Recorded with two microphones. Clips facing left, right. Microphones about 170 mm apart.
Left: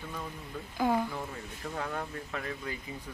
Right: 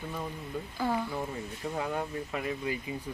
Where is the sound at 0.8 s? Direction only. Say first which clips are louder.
Left 3 dB; 15° left (ahead or behind).